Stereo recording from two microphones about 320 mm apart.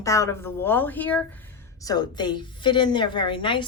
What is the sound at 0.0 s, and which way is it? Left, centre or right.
A woman's voice, centre.